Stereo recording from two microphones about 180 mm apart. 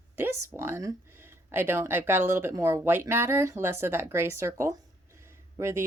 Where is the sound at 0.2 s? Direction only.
15° right (ahead or behind).